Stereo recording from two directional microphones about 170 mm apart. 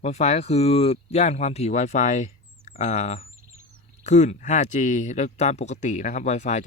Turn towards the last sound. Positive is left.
turn(degrees=45)  # may be behind; listen again after turning